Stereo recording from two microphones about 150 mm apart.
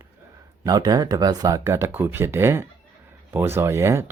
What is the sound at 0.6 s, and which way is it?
Speech, 25° right (ahead or behind).